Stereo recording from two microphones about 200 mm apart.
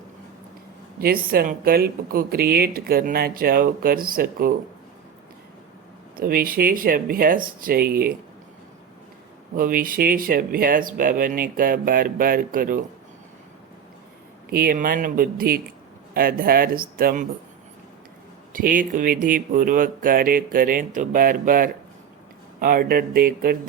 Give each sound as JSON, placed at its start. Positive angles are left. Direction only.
{"t": 0.9, "sound": "speech", "side_deg": -50}
{"t": 6.1, "sound": "speech", "side_deg": -45}
{"t": 9.6, "sound": "speech", "side_deg": -45}
{"t": 14.5, "sound": "speech", "side_deg": -45}
{"t": 18.5, "sound": "speech", "side_deg": -45}